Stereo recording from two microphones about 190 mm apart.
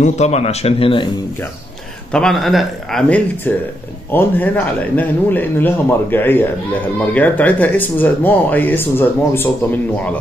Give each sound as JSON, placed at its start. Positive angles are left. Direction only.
{"t": 0.0, "sound": "speech", "side_deg": 35}
{"t": 2.1, "sound": "a man's voice", "side_deg": 0}